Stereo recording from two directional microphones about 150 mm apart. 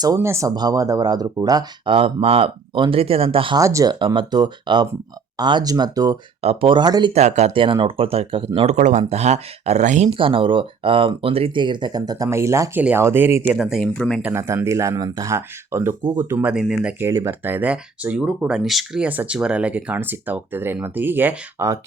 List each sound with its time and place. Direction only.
0.0 s speech: 20° right (ahead or behind); by 3.6 s 35° right (ahead or behind)
3.6 s speech: 20° right (ahead or behind)
4.0 s speech: 35° right (ahead or behind)
6.4 s speech: 40° right (ahead or behind)
7.1 s speech: 50° right (ahead or behind)
8.7 s speech: 50° right (ahead or behind)
10.1 s speech: 35° right (ahead or behind); by 13.6 s 15° right (ahead or behind)
13.6 s speech: centre (ahead or behind)
14.2 s speech: 15° right (ahead or behind)
16.4 s speech: 5° right (ahead or behind)
16.8 s speech: 15° right (ahead or behind)